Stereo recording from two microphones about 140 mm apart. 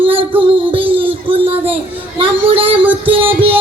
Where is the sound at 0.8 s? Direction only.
15° right (ahead or behind).